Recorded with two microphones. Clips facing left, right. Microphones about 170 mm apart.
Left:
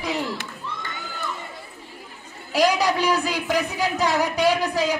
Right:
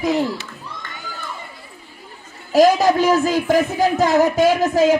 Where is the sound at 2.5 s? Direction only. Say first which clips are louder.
Right 7 dB; 45° right (ahead or behind).